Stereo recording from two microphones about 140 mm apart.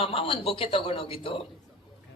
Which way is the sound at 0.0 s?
40° left (ahead or behind).